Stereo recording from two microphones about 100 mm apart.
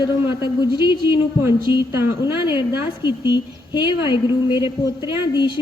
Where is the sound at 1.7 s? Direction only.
20° right (ahead or behind).